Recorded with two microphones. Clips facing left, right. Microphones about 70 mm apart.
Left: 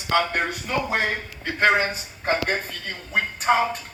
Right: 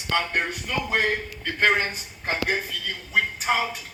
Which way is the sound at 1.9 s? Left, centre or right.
Left.